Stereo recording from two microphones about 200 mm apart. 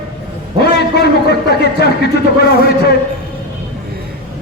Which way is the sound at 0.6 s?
55° left (ahead or behind).